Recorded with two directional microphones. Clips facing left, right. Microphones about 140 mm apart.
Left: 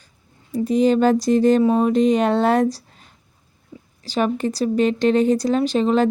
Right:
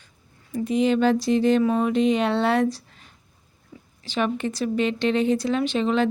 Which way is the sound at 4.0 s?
40° left (ahead or behind).